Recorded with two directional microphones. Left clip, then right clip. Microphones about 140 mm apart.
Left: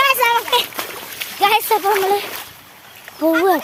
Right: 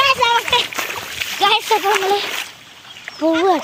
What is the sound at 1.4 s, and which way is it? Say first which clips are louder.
Speech: even; 10° left (ahead or behind).